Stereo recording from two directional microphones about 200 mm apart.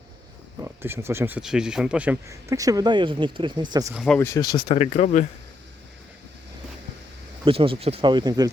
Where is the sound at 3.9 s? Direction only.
5° left (ahead or behind).